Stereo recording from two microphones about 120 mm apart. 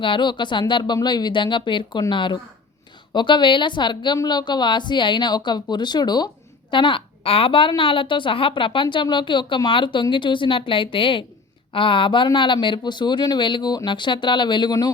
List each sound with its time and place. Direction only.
0.0 s speech: 40° left (ahead or behind)